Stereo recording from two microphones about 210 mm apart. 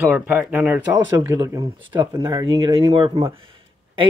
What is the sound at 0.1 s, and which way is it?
Speech, 10° right (ahead or behind).